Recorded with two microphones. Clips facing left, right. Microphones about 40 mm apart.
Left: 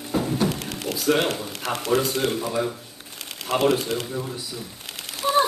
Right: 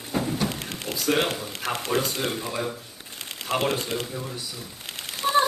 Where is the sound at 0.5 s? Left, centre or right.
Right.